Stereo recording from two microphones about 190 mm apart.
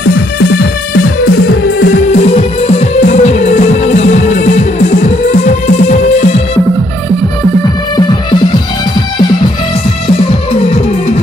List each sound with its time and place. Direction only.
1.8 s music: 40° left (ahead or behind)
10.0 s music: 30° left (ahead or behind)